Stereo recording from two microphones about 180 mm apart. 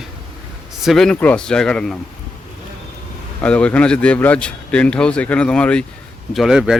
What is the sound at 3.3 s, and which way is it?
A man's voice, 5° left (ahead or behind).